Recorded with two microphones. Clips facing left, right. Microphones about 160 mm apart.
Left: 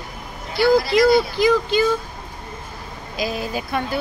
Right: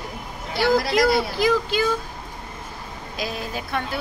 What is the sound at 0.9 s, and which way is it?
Speech, 5° right (ahead or behind).